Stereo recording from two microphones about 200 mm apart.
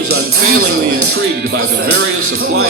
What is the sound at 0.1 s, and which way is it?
Speech, 50° right (ahead or behind).